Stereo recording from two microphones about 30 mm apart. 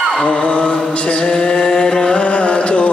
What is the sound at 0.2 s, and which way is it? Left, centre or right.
Mantra, left.